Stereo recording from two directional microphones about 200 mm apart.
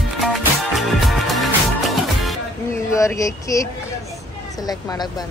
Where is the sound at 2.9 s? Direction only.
15° left (ahead or behind).